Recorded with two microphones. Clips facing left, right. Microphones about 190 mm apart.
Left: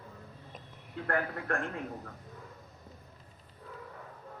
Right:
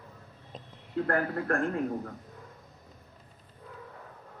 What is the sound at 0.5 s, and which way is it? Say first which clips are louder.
A man's voice: right 11 dB; 35° right (ahead or behind).